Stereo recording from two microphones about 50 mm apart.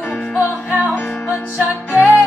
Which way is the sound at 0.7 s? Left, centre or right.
Right.